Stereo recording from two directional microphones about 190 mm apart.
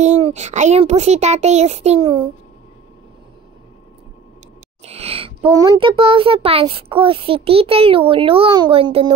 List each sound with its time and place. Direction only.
0.0 s a child's voice: 35° right (ahead or behind)
4.8 s a child's voice: 30° right (ahead or behind)